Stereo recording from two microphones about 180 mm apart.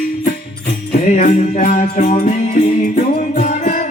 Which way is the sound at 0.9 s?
40° left (ahead or behind).